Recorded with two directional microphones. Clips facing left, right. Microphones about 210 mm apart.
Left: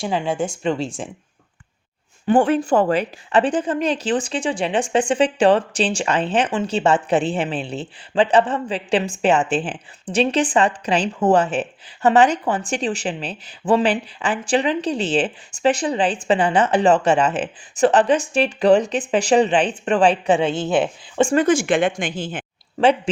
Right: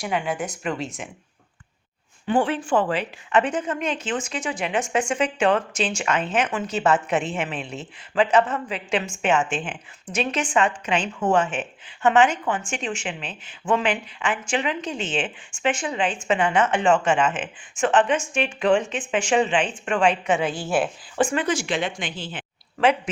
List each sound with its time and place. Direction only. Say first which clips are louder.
0.0 s speech: left 4 dB; 25° left (ahead or behind)
2.2 s a woman's voice: left 6 dB; 45° left (ahead or behind); by 21.3 s 25° left (ahead or behind)
21.3 s speech: left 8 dB; 50° left (ahead or behind)